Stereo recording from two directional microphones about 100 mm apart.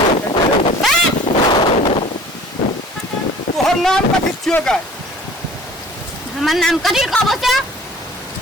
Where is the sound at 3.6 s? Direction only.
5° left (ahead or behind).